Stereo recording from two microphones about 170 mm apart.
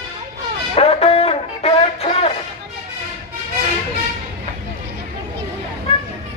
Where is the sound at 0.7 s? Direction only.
35° left (ahead or behind).